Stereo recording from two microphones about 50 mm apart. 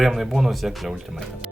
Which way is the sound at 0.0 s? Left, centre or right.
Centre.